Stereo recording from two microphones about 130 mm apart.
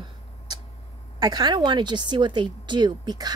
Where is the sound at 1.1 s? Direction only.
35° right (ahead or behind).